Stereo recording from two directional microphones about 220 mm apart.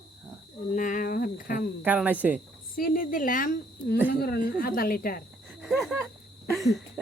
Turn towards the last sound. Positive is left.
turn(degrees=-10)  # may be behind; listen again after turning